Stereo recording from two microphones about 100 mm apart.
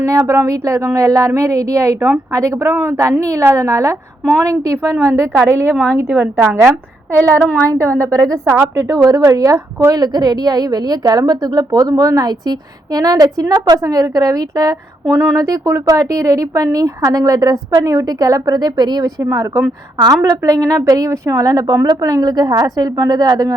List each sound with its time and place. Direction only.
0.1 s a woman's voice: 35° right (ahead or behind)
7.1 s speech: 20° left (ahead or behind)
7.7 s a woman's voice: 30° right (ahead or behind)